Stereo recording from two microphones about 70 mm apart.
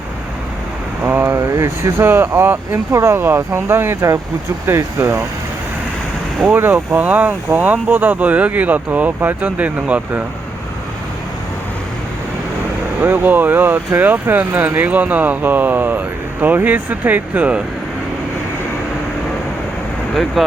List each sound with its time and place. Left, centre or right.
1.0 s speech: right
1.4 s speech: right
2.9 s speech: right
6.6 s speech: right
13.0 s speech: right